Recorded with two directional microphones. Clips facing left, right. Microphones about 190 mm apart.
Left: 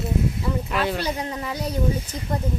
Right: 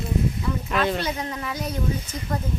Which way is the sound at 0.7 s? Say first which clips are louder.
Right 3 dB; 10° left (ahead or behind).